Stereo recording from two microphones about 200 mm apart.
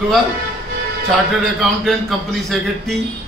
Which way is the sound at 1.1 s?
Centre (ahead or behind).